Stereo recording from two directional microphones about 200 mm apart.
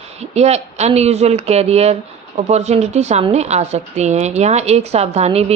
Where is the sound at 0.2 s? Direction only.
30° right (ahead or behind).